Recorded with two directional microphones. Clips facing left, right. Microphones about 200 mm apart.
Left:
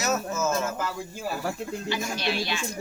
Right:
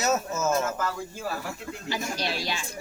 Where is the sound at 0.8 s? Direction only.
15° left (ahead or behind).